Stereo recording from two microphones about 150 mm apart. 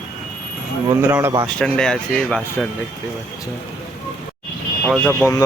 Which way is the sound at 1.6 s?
5° left (ahead or behind).